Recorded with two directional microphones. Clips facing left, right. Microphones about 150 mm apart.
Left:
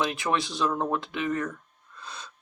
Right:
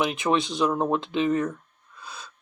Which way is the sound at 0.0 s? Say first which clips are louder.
Right 3 dB; 20° right (ahead or behind).